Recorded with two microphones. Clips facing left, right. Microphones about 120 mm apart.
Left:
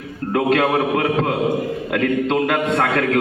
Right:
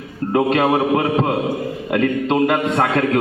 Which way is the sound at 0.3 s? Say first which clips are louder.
Right 1 dB; 25° right (ahead or behind).